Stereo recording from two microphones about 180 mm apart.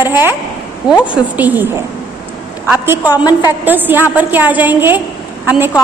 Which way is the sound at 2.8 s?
10° right (ahead or behind).